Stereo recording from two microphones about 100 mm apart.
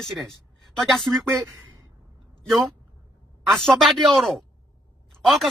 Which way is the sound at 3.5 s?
5° left (ahead or behind).